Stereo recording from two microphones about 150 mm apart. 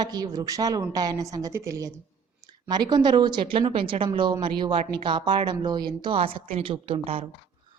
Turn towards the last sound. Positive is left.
turn(degrees=-40)  # may be behind; listen again after turning